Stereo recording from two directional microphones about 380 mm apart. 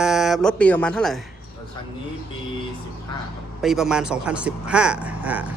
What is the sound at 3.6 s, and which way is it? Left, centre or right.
A man's voice, centre.